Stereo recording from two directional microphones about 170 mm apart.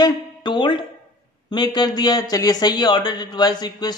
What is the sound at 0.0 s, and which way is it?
A man's voice, 25° left (ahead or behind).